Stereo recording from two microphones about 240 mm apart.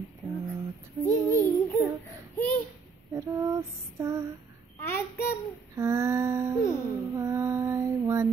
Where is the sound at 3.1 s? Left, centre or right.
Centre.